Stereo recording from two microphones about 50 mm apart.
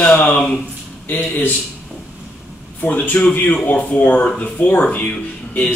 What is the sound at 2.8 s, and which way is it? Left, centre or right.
Speech, left.